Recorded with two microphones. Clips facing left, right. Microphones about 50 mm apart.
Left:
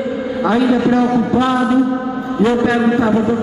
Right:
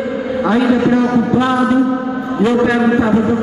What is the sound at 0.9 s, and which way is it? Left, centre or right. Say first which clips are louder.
Speech: right 1 dB; centre.